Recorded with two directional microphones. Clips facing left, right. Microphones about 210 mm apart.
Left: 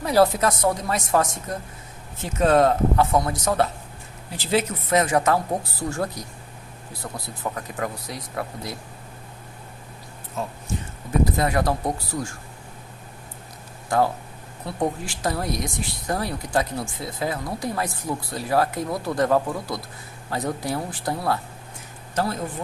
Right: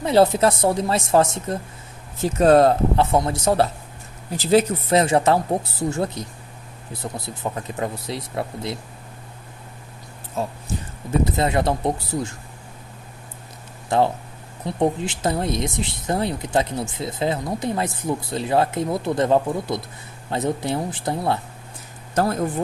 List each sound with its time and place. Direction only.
0.0 s speech: 25° right (ahead or behind)
2.2 s speech: 35° right (ahead or behind)
7.5 s speech: 25° right (ahead or behind)
10.4 s speech: 30° right (ahead or behind)
13.9 s speech: 25° right (ahead or behind)
22.1 s speech: 50° right (ahead or behind)